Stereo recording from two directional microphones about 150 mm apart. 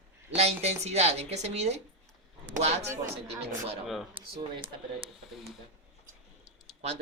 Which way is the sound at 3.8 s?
Centre (ahead or behind).